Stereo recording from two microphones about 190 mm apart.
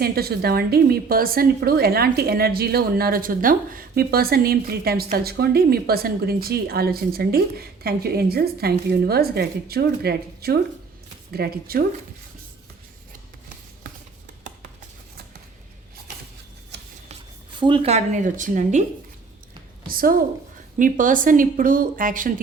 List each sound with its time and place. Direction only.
0.0 s a woman's voice: 55° right (ahead or behind)
17.6 s speech: 25° right (ahead or behind)
19.9 s a woman's voice: 50° right (ahead or behind)